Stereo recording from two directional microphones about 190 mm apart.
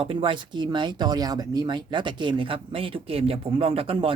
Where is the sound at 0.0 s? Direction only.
30° right (ahead or behind).